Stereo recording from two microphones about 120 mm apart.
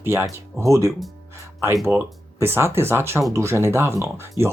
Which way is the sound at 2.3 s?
20° right (ahead or behind).